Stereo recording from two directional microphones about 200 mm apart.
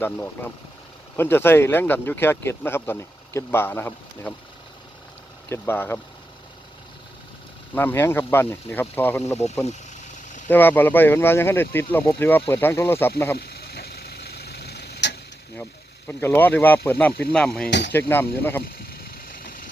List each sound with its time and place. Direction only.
0.0 s speech: 10° left (ahead or behind)
5.5 s speech: 10° left (ahead or behind)
7.8 s speech: 10° left (ahead or behind)
10.5 s speech: 10° left (ahead or behind)
13.4 s a sound: 50° left (ahead or behind)
16.0 s speech: 10° left (ahead or behind)
17.7 s speech: 60° left (ahead or behind)
17.9 s speech: 10° left (ahead or behind)
19.4 s vehicle: 45° left (ahead or behind)